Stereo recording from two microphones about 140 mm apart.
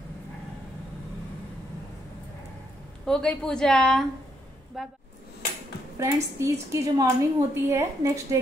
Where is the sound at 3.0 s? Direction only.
5° left (ahead or behind).